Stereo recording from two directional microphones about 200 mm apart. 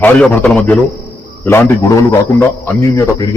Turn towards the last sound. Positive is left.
turn(degrees=15)  # may be behind; listen again after turning